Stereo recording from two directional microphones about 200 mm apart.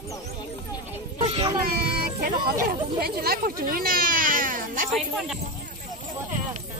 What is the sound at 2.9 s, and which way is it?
Speech, 50° right (ahead or behind).